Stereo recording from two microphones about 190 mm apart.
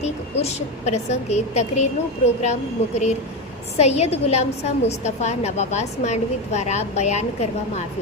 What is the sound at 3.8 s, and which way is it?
A woman's voice, 35° left (ahead or behind).